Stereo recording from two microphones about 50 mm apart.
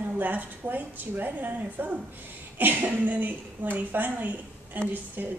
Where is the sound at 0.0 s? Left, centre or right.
Right.